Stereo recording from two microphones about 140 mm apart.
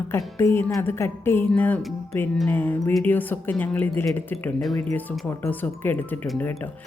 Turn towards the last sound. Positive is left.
turn(degrees=15)  # may be behind; listen again after turning